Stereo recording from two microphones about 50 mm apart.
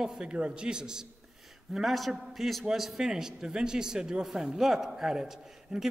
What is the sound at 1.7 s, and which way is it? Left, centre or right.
A man's voice, centre.